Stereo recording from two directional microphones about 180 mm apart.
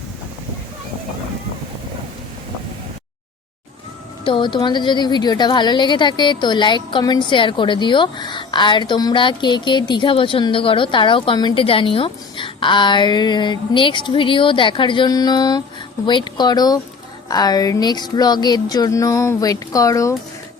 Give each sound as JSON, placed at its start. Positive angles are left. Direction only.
{"t": 4.2, "sound": "a woman's voice", "side_deg": 25}